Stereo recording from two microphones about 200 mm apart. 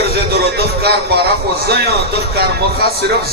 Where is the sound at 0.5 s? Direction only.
50° right (ahead or behind).